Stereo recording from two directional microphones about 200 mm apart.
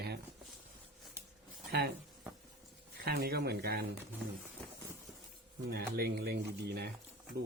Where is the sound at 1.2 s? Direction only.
10° right (ahead or behind).